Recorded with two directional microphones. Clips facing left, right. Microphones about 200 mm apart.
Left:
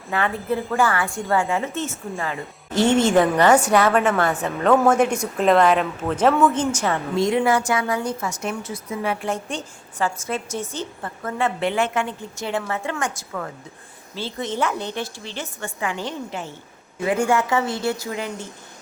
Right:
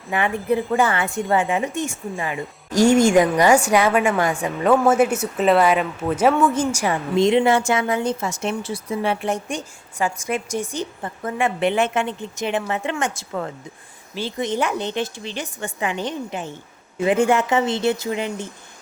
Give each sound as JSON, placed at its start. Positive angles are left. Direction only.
{"t": 0.1, "sound": "a woman's voice", "side_deg": -15}